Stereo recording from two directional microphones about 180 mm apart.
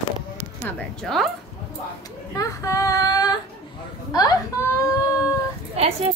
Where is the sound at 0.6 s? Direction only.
5° left (ahead or behind).